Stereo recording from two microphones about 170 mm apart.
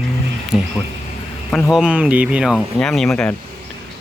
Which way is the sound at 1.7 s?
5° right (ahead or behind).